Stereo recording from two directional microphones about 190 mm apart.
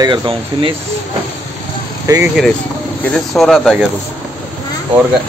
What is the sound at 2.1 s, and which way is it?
Speech, 20° right (ahead or behind).